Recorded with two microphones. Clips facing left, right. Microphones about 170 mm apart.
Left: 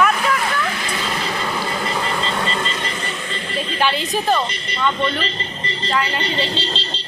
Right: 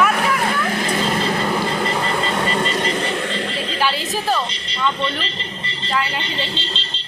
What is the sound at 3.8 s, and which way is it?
Speech, 5° right (ahead or behind).